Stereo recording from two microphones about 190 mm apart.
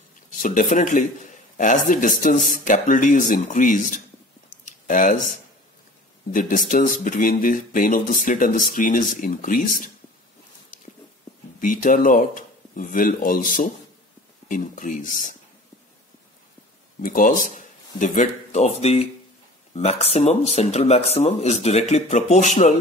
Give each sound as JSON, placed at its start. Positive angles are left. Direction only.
{"t": 0.3, "sound": "a man's voice", "side_deg": 40}
{"t": 11.6, "sound": "speech", "side_deg": 45}
{"t": 17.0, "sound": "a man's voice", "side_deg": 45}